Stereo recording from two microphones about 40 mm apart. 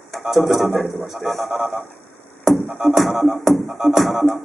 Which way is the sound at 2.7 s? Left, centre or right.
Centre.